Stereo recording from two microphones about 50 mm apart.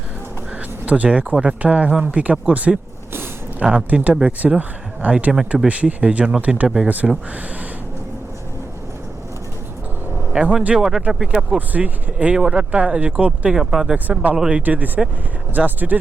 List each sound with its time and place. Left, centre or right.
0.9 s speech: right
6.8 s speech: right
10.5 s speech: right
10.8 s speech: centre
11.5 s speech: right
13.5 s speech: centre
13.9 s speech: right
14.3 s speech: centre
14.6 s speech: right